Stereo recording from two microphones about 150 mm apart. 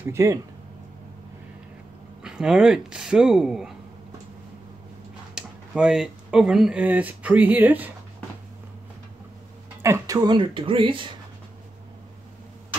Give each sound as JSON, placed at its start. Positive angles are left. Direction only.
{"t": 0.0, "sound": "speech", "side_deg": -20}
{"t": 2.2, "sound": "speech", "side_deg": -5}
{"t": 5.3, "sound": "speech", "side_deg": -5}
{"t": 9.8, "sound": "speech", "side_deg": -20}